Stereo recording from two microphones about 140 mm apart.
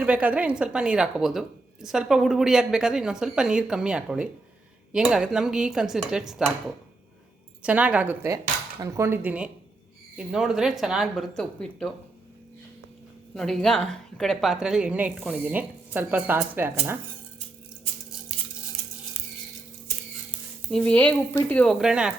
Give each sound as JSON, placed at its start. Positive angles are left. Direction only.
{"t": 0.0, "sound": "speech", "side_deg": -10}
{"t": 7.6, "sound": "a woman's voice", "side_deg": -10}
{"t": 13.3, "sound": "a woman's voice", "side_deg": 5}
{"t": 20.7, "sound": "speech", "side_deg": 5}
{"t": 21.8, "sound": "speech", "side_deg": -5}